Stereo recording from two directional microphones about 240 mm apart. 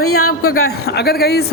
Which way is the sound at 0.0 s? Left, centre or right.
Left.